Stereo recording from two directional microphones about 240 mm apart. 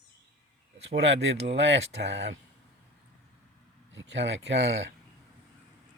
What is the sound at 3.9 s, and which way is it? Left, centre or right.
Speech, right.